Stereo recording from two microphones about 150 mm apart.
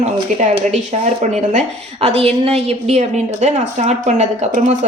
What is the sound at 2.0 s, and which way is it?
A woman's voice, 40° right (ahead or behind).